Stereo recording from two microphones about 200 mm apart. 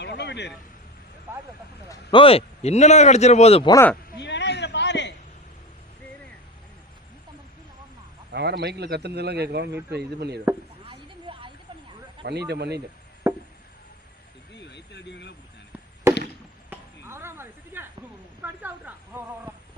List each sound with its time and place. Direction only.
0.0 s vehicle: 60° left (ahead or behind)
1.3 s speech: 10° right (ahead or behind)
2.0 s speech: 25° left (ahead or behind)
3.7 s speech: 15° left (ahead or behind)
4.2 s a sound: 60° left (ahead or behind)
8.3 s speech: 55° right (ahead or behind)
10.8 s a sound: 25° right (ahead or behind)
12.2 s speech: 55° right (ahead or behind)
13.2 s chop: 15° right (ahead or behind)
14.5 s a sound: 60° left (ahead or behind)
16.6 s chop: 10° right (ahead or behind)
18.4 s a sound: 10° right (ahead or behind)